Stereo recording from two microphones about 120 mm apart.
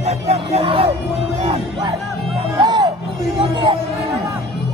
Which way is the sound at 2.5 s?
35° right (ahead or behind).